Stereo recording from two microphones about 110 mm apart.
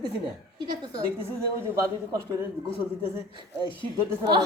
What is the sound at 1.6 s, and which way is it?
Speech, 25° right (ahead or behind).